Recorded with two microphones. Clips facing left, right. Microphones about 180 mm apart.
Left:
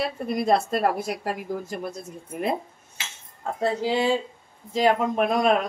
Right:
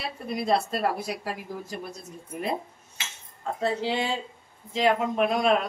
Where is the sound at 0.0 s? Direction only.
50° left (ahead or behind).